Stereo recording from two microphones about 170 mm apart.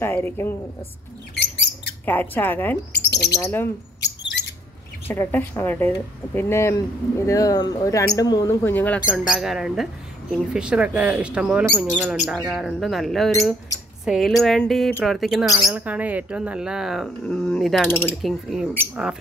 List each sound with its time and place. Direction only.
0.0 s speech: 15° left (ahead or behind)
1.3 s rodents: 90° left
2.0 s speech: 10° left (ahead or behind)
2.9 s bird: 75° left (ahead or behind)
3.3 s speech: 15° left (ahead or behind)
4.0 s a sound: 85° left
5.0 s speech: 10° left (ahead or behind)
9.3 s speech: 5° right (ahead or behind)
17.8 s speech: 10° left (ahead or behind)
18.2 s speech: centre (ahead or behind)